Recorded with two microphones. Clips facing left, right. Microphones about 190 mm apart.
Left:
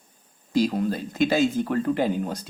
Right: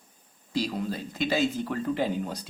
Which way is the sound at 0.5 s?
45° left (ahead or behind).